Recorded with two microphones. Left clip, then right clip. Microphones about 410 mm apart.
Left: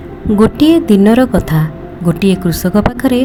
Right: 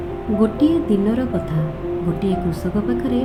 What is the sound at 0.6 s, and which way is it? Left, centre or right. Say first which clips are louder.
Speech: left 9 dB; left.